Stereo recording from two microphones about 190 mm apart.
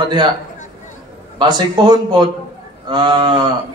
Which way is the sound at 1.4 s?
20° right (ahead or behind).